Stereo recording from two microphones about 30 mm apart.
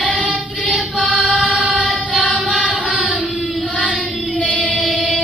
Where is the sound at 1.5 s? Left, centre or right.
Right.